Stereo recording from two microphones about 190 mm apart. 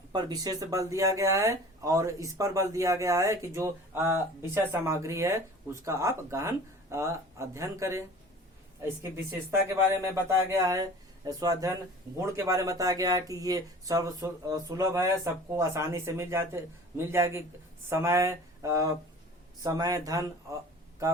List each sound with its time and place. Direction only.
0.1 s speech: 20° right (ahead or behind)